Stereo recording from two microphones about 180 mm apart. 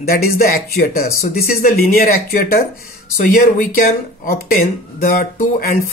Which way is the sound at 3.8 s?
50° left (ahead or behind).